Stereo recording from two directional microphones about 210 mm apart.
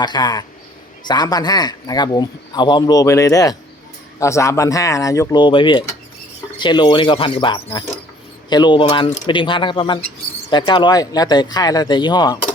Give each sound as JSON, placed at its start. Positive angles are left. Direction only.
{"t": 0.0, "sound": "speech", "side_deg": 20}